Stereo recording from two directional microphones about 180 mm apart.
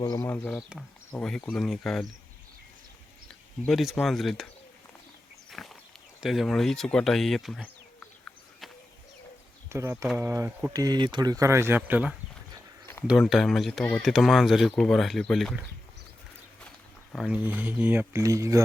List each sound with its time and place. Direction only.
0.0 s speech: 15° left (ahead or behind)
3.2 s speech: centre (ahead or behind)
5.5 s a sound: centre (ahead or behind)
6.1 s speech: centre (ahead or behind)
9.6 s speech: 15° right (ahead or behind)
12.8 s a sound: 15° left (ahead or behind)
13.1 s speech: centre (ahead or behind)
17.1 s speech: centre (ahead or behind); by 18.6 s 15° right (ahead or behind)